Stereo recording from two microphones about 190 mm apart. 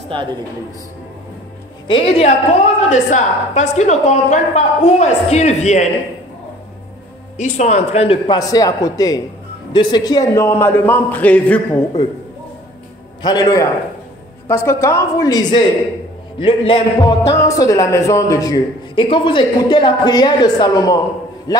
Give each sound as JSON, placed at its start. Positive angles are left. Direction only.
{"t": 1.9, "sound": "a man's voice", "side_deg": 30}
{"t": 7.3, "sound": "a man's voice", "side_deg": 40}
{"t": 13.2, "sound": "a man's voice", "side_deg": 20}
{"t": 17.3, "sound": "a man's voice", "side_deg": 15}